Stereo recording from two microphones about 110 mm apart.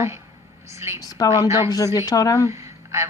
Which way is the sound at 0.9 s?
35° left (ahead or behind).